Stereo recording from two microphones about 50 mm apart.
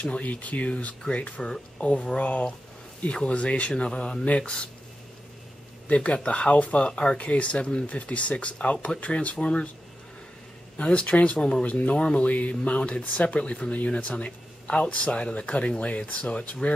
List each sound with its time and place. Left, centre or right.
0.0 s speech: left
5.9 s speech: left
10.8 s speech: left
11.9 s speech: centre